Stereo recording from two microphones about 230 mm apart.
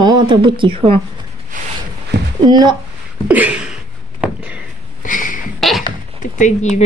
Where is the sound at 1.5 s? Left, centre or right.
Right.